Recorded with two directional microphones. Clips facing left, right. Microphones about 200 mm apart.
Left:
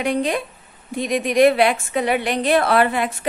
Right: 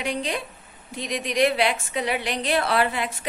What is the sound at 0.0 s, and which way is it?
A woman's voice, 55° left (ahead or behind).